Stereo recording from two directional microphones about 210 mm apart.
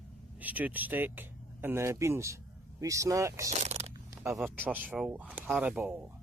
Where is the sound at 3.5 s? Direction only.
30° right (ahead or behind).